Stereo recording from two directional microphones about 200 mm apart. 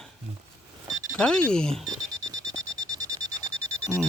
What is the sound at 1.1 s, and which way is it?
Speech, 5° left (ahead or behind).